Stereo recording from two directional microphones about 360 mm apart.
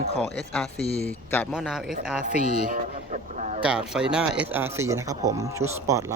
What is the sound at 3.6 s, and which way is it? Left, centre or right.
Speech, centre.